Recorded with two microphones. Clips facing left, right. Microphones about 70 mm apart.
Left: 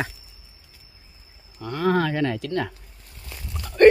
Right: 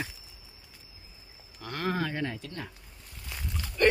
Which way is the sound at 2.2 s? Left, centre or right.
Left.